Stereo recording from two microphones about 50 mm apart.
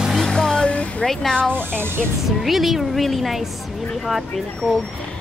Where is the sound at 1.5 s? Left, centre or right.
Right.